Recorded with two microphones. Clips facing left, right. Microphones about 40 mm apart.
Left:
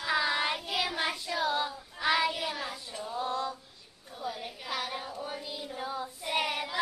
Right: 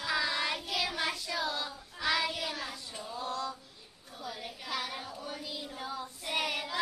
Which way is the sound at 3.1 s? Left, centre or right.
Left.